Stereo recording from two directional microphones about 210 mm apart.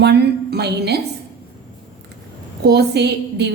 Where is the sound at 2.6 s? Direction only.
50° right (ahead or behind).